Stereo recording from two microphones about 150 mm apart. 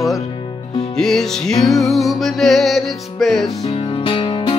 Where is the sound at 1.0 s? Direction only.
5° left (ahead or behind).